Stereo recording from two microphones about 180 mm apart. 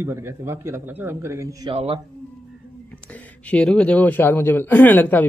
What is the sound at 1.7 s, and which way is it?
Speech, 30° right (ahead or behind).